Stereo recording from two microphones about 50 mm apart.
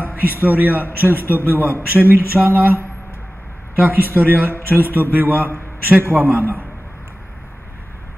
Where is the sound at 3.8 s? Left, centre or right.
Right.